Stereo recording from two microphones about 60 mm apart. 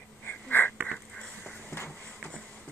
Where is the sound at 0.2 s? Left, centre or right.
Left.